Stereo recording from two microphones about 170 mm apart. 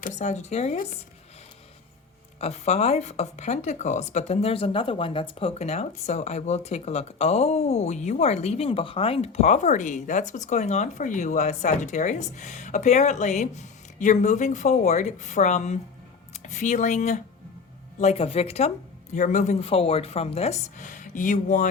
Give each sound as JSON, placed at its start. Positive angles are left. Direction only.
{"t": 0.0, "sound": "speech", "side_deg": 45}
{"t": 2.4, "sound": "speech", "side_deg": 40}